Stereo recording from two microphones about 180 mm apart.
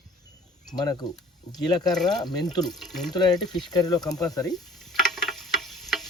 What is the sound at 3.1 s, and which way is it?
Speech, 25° left (ahead or behind).